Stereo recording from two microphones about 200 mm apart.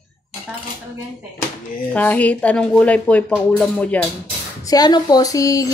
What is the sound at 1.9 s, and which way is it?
Speech, 5° left (ahead or behind).